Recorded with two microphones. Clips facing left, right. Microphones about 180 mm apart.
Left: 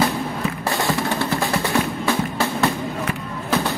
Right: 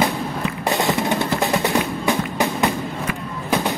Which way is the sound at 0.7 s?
20° right (ahead or behind).